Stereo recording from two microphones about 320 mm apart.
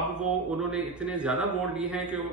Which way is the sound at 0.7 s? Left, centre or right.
Centre.